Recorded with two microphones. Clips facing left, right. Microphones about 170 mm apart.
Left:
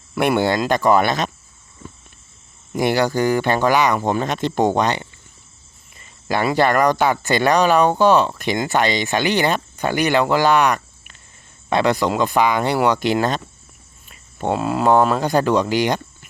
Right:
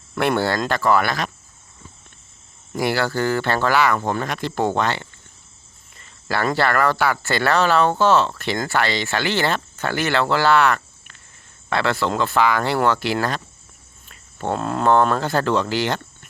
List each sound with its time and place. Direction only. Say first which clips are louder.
0.1 s speech: left 3 dB; 15° left (ahead or behind)
1.8 s a sound: left 8 dB; 65° left (ahead or behind)
2.7 s speech: left 3 dB; 20° left (ahead or behind)
14.1 s cricket: left 3 dB; 15° left (ahead or behind)
14.6 s speech: left 1 dB; 5° left (ahead or behind)